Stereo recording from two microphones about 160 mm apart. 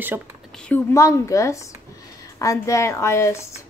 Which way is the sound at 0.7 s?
20° left (ahead or behind).